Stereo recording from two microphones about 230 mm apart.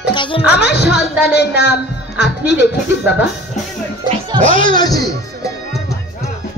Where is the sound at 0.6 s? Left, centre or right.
Left.